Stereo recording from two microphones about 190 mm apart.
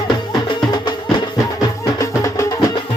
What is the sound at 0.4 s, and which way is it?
Music, 25° left (ahead or behind).